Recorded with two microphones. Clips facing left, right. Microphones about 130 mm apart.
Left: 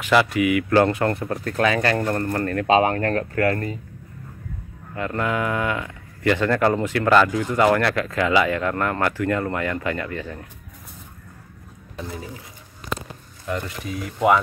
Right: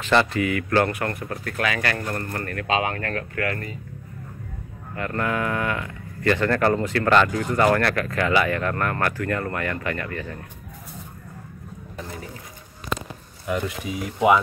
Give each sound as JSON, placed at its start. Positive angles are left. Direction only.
{"t": 0.0, "sound": "speech", "side_deg": 10}
{"t": 4.9, "sound": "speech", "side_deg": 20}
{"t": 13.5, "sound": "speech", "side_deg": -10}